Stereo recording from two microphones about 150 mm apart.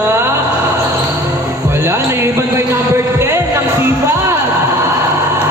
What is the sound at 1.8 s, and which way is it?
Music, 15° right (ahead or behind).